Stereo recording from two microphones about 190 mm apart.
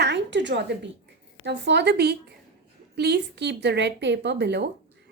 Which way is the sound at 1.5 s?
65° right (ahead or behind).